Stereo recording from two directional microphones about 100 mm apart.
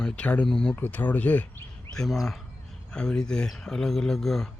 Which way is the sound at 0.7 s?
20° left (ahead or behind).